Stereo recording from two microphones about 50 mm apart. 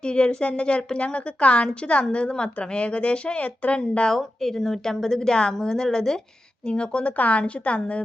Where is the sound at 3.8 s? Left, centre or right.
Centre.